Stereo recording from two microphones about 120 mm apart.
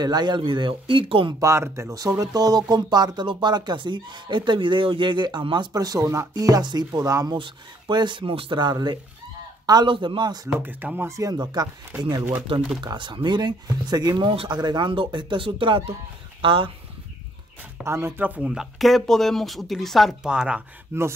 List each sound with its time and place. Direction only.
0.0 s speech: 35° right (ahead or behind)
1.4 s speech: 25° right (ahead or behind)
7.3 s speech: 45° right (ahead or behind)
10.6 s speech: 15° right (ahead or behind); by 14.3 s 35° right (ahead or behind)
14.3 s speech: 50° right (ahead or behind)
14.6 s speech: 40° right (ahead or behind)
17.8 s speech: 20° right (ahead or behind)
20.9 s speech: 20° right (ahead or behind)